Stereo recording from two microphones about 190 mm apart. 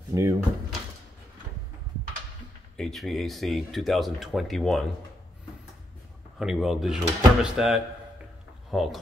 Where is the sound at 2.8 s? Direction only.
Centre (ahead or behind).